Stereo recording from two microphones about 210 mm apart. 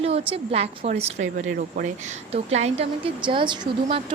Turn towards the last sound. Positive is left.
turn(degrees=-25)  # may be behind; listen again after turning